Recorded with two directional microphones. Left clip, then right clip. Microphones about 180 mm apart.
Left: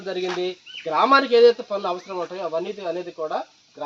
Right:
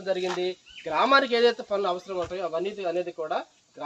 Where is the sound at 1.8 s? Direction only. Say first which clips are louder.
Left 1 dB; 50° left (ahead or behind).